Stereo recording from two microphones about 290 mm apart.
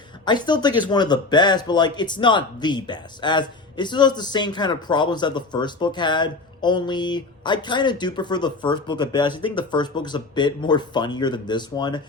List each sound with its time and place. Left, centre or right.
0.3 s speech: centre